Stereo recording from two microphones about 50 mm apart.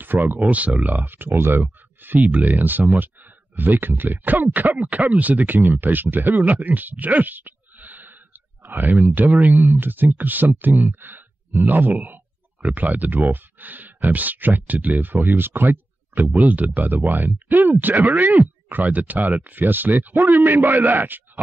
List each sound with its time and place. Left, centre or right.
0.0 s speech: right
0.5 s speech: right
2.3 s speech: right
16.3 s speech: right